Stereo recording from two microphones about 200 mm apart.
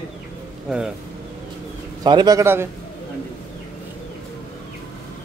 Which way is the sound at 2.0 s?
20° right (ahead or behind).